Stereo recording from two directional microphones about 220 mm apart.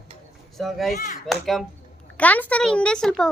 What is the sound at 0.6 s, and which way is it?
Speech, centre (ahead or behind).